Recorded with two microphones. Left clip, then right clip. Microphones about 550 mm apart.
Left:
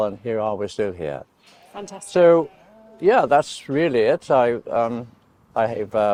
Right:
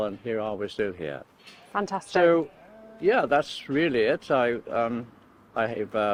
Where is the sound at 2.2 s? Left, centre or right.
Left.